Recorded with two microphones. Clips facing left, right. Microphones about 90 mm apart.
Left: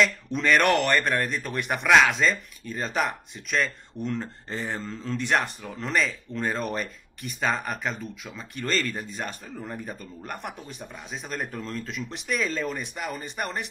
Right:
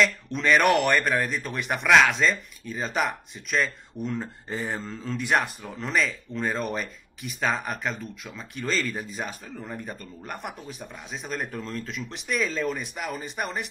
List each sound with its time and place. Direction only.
0.0 s speech: centre (ahead or behind)